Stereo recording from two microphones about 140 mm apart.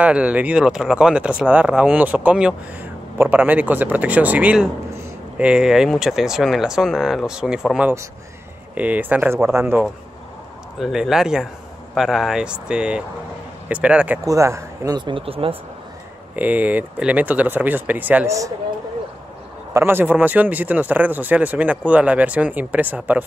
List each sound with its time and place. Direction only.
0.0 s speech: 10° right (ahead or behind)
10.8 s speech: 5° right (ahead or behind)
14.2 s speech: 20° right (ahead or behind)
15.0 s speech: 35° right (ahead or behind)
16.3 s speech: 10° right (ahead or behind)
19.7 s speech: 15° right (ahead or behind)